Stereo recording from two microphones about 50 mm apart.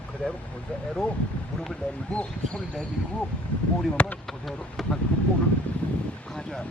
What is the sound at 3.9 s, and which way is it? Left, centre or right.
Speech, left.